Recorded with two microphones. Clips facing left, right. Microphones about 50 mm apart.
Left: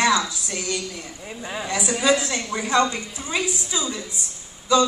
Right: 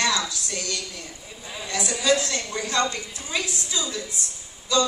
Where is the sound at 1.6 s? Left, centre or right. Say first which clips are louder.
Left 2 dB; centre.